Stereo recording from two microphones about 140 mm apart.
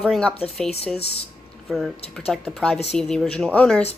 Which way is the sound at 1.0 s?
45° left (ahead or behind).